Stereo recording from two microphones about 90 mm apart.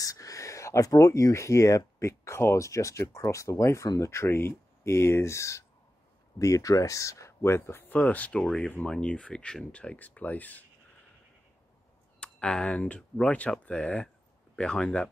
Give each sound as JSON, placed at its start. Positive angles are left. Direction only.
{"t": 0.0, "sound": "speech", "side_deg": 40}
{"t": 7.9, "sound": "speech", "side_deg": 20}
{"t": 12.2, "sound": "speech", "side_deg": 10}